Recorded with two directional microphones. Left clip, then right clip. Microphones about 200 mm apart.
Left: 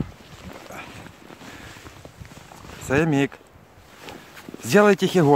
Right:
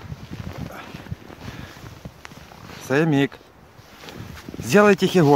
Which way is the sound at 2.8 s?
Centre (ahead or behind).